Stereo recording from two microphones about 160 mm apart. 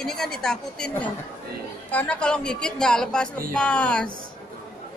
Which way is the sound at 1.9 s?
10° left (ahead or behind).